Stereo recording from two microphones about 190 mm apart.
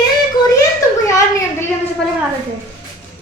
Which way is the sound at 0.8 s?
15° left (ahead or behind).